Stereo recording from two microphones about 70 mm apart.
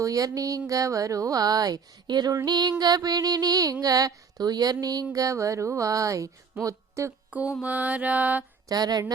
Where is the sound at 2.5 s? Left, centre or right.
Right.